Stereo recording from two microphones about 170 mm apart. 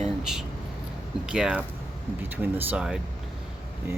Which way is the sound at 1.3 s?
5° right (ahead or behind).